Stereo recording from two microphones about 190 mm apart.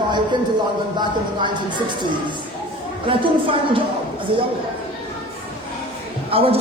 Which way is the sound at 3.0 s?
25° right (ahead or behind).